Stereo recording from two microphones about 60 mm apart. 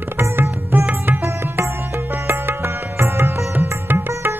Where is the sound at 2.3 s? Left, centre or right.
Right.